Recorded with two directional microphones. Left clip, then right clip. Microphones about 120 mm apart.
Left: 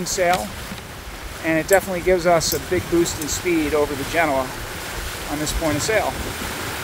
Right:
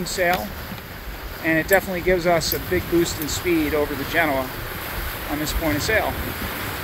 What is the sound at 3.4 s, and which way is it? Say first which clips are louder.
Speech: left 2 dB; 5° left (ahead or behind).